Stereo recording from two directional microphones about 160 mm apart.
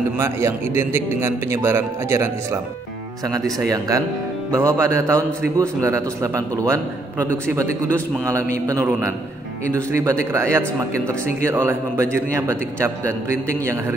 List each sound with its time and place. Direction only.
0.2 s speech: 15° right (ahead or behind)